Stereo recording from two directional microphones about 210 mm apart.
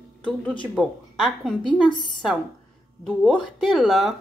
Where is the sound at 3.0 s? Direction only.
Centre (ahead or behind).